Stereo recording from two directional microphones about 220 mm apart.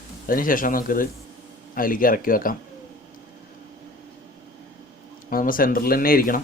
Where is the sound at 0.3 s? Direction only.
40° left (ahead or behind).